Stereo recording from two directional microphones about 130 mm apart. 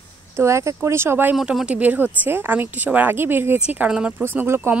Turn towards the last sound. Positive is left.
turn(degrees=-20)  # may be behind; listen again after turning